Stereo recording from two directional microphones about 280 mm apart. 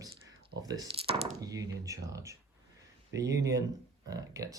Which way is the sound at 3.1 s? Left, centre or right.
Right.